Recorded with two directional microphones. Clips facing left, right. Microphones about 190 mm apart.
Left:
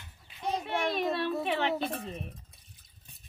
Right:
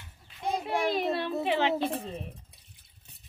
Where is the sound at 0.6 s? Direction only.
30° right (ahead or behind).